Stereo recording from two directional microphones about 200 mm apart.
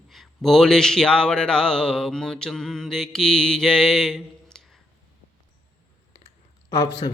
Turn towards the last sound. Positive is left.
turn(degrees=25)  # may be behind; listen again after turning